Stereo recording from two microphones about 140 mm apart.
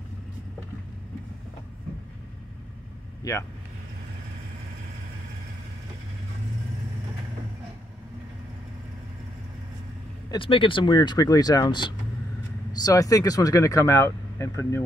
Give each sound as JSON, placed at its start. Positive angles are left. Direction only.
{"t": 3.2, "sound": "vehicle", "side_deg": 25}
{"t": 10.3, "sound": "speech", "side_deg": 40}